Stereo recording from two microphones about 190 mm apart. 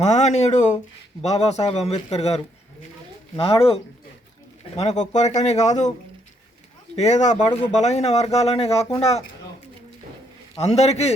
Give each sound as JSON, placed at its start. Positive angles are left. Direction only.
{"t": 0.0, "sound": "speech", "side_deg": 35}
{"t": 4.8, "sound": "speech", "side_deg": 35}
{"t": 6.9, "sound": "speech", "side_deg": 35}
{"t": 10.6, "sound": "speech", "side_deg": 35}